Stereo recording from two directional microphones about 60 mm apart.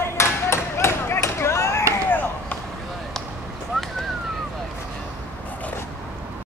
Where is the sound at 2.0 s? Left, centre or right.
Left.